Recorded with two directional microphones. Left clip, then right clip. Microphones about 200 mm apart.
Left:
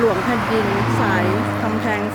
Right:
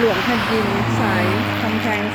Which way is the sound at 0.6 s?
40° right (ahead or behind).